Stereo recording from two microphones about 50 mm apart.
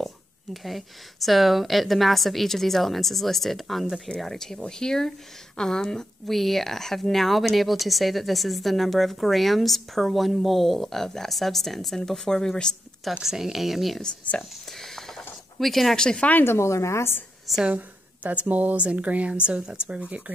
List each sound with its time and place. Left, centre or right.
0.0 s speech: centre
13.2 s speech: centre
14.3 s speech: left
14.7 s a sound: centre
16.0 s speech: centre
16.4 s a woman's voice: left
17.6 s a woman's voice: right